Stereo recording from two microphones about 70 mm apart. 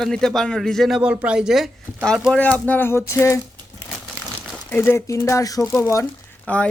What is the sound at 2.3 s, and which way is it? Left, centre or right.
Speech, left.